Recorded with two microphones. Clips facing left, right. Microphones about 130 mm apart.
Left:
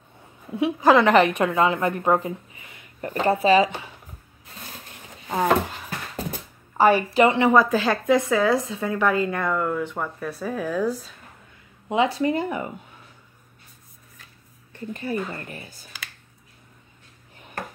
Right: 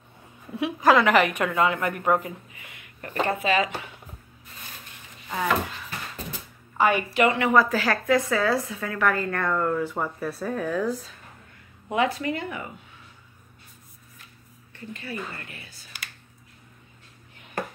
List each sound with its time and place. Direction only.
0.5 s a woman's voice: 20° left (ahead or behind)
5.3 s a woman's voice: 35° left (ahead or behind); by 11.0 s 5° left (ahead or behind)
11.9 s a woman's voice: 25° left (ahead or behind)
14.9 s a woman's voice: 40° left (ahead or behind)